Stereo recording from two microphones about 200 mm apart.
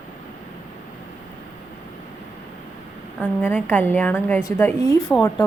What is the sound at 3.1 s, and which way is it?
Speech, 10° left (ahead or behind).